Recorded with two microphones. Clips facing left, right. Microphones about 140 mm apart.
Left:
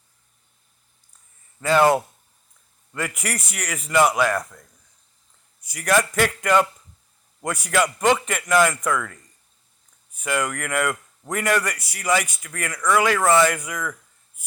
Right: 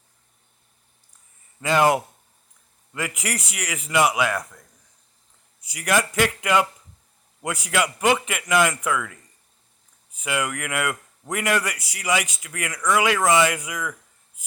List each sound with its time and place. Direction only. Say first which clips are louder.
1.6 s a man's voice: left 2 dB; 15° right (ahead or behind)
5.6 s a man's voice: left 2 dB; 10° right (ahead or behind)
10.2 s a man's voice: left 2 dB; 10° right (ahead or behind)